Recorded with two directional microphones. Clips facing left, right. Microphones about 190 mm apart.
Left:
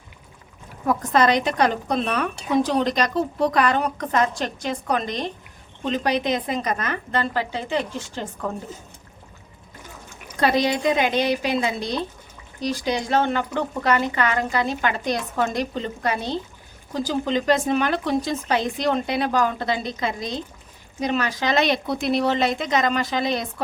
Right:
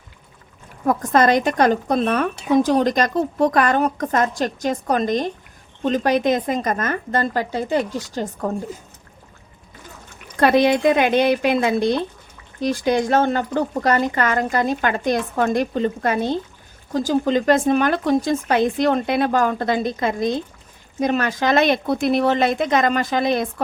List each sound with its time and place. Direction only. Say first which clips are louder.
0.9 s a woman's voice: right 3 dB; 50° right (ahead or behind)
10.4 s a woman's voice: right 5 dB; 55° right (ahead or behind)